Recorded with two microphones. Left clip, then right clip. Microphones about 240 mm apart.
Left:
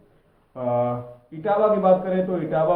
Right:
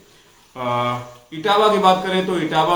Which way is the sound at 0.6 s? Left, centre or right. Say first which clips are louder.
Right 2 dB; centre.